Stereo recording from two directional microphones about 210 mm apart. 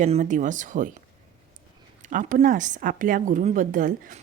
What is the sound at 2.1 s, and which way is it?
Speech, 40° right (ahead or behind).